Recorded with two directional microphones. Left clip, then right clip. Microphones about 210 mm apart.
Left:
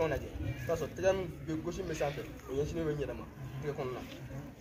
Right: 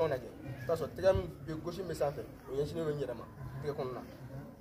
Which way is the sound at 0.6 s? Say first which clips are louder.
Right 1 dB; 15° right (ahead or behind).